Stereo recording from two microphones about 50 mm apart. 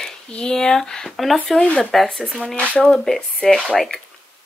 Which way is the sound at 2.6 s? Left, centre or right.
Left.